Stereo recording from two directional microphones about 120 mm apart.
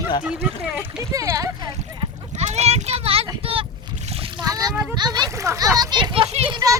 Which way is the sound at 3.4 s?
50° right (ahead or behind).